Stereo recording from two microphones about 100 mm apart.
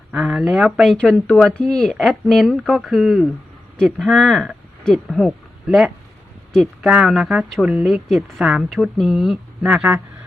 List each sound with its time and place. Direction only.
0.1 s speech: 5° right (ahead or behind)
0.9 s speech: 10° left (ahead or behind); by 9.9 s 10° right (ahead or behind)